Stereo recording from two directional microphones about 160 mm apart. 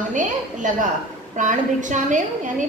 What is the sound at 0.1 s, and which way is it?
A woman's voice, 50° right (ahead or behind).